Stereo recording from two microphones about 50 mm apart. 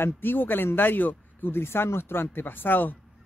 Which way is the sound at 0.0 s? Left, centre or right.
Left.